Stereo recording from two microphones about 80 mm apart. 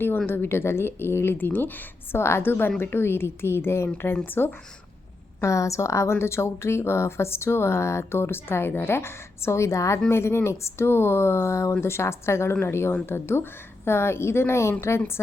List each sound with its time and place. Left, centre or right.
0.3 s a woman's voice: left
5.4 s a woman's voice: left